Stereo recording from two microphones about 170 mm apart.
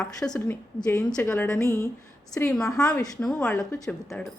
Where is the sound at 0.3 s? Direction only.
10° left (ahead or behind).